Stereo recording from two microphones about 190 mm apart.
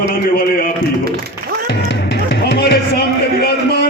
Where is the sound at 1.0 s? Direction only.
55° right (ahead or behind).